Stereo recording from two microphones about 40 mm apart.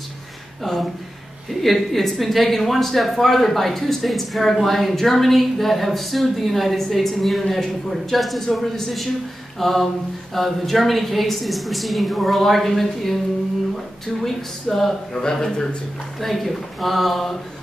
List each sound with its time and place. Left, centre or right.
0.7 s speech: centre
16.2 s speech: centre